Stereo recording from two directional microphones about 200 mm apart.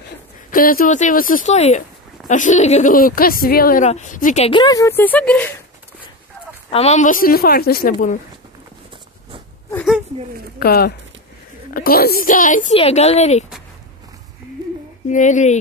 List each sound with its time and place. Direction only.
0.5 s speech: 45° left (ahead or behind)
4.5 s speech: 20° left (ahead or behind)
6.7 s a woman's voice: 30° left (ahead or behind)
10.6 s a woman's voice: 50° left (ahead or behind); by 13.5 s 35° left (ahead or behind)
15.0 s speech: 40° left (ahead or behind)